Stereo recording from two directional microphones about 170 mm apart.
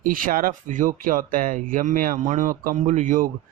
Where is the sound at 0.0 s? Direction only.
55° right (ahead or behind).